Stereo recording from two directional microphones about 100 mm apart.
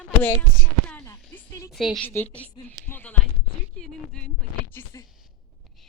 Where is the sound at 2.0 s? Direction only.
20° left (ahead or behind).